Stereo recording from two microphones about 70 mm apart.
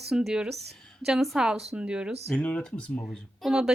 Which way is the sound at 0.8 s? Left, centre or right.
Centre.